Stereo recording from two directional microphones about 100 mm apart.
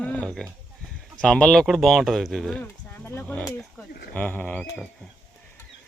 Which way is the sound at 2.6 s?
20° left (ahead or behind).